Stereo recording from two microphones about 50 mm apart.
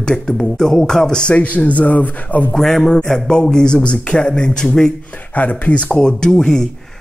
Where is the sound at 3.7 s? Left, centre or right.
Left.